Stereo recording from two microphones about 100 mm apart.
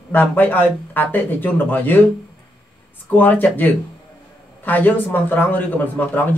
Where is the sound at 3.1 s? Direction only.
20° left (ahead or behind).